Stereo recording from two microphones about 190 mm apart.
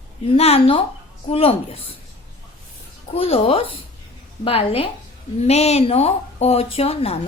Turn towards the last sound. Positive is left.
turn(degrees=30)  # may be behind; listen again after turning